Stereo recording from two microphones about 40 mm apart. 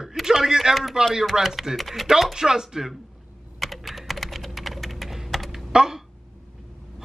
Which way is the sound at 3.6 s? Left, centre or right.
Centre.